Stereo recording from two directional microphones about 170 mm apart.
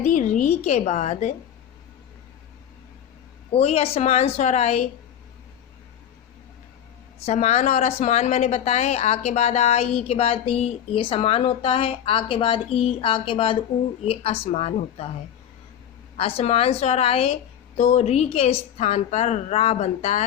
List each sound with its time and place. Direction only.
0.0 s a woman's voice: 45° left (ahead or behind)
3.5 s a woman's voice: 35° left (ahead or behind)
7.3 s a woman's voice: 40° left (ahead or behind)
16.1 s a woman's voice: 35° left (ahead or behind)